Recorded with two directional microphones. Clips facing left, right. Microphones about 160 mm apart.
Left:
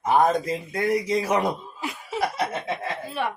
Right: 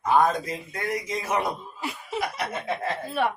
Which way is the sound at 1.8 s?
Centre (ahead or behind).